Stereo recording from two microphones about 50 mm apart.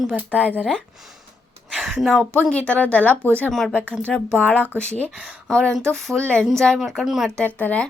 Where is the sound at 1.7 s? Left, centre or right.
Centre.